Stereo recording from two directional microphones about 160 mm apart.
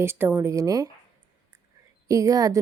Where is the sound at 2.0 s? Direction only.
20° right (ahead or behind).